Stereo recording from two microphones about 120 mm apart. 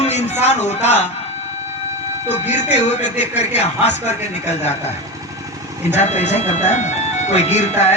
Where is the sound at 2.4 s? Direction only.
65° left (ahead or behind).